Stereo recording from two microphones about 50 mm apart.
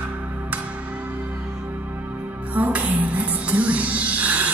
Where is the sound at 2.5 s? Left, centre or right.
Right.